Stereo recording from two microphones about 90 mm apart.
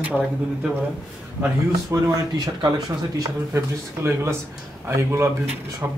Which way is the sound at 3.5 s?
30° right (ahead or behind).